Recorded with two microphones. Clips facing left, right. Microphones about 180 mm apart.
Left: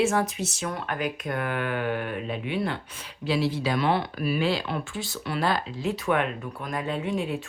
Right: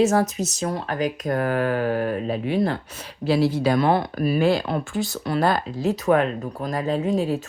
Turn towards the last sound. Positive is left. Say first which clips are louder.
# right 6 dB
turn(degrees=-40)  # may be behind; listen again after turning